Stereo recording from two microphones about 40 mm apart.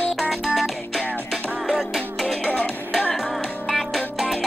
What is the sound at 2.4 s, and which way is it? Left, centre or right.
Music, left.